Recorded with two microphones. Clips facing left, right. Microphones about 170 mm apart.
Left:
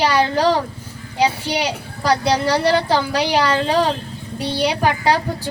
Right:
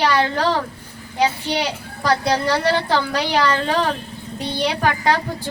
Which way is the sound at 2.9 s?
15° left (ahead or behind).